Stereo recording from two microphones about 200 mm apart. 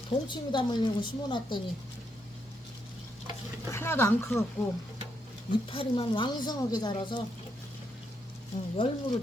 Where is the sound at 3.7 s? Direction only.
10° left (ahead or behind).